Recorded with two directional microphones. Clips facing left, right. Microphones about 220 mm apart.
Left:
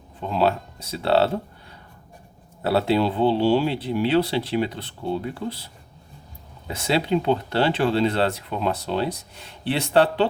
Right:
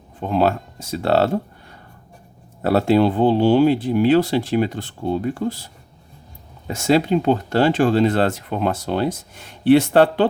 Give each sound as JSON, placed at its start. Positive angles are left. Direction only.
{"t": 0.3, "sound": "speech", "side_deg": -50}
{"t": 2.6, "sound": "speech", "side_deg": -50}
{"t": 6.7, "sound": "speech", "side_deg": -45}